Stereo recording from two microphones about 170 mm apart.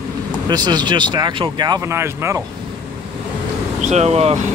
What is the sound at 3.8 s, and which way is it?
Speech, 40° right (ahead or behind).